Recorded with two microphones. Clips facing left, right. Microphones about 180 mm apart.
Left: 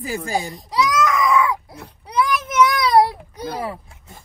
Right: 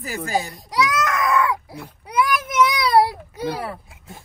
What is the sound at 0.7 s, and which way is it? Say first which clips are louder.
Baby cry: left 2 dB; centre (ahead or behind).